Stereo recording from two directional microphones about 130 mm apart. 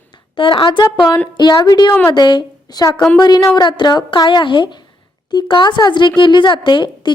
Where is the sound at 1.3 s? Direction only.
35° left (ahead or behind).